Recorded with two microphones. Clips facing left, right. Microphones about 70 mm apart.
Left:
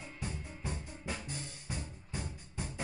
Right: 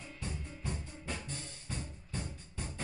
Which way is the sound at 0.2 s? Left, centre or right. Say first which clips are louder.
Left 1 dB; centre.